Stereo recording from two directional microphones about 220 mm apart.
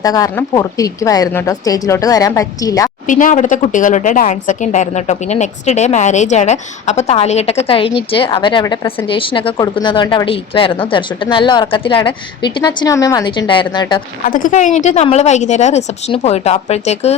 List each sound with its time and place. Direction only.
0.0 s a woman's voice: 15° left (ahead or behind)
3.1 s a woman's voice: 35° left (ahead or behind)
14.3 s a woman's voice: 40° left (ahead or behind)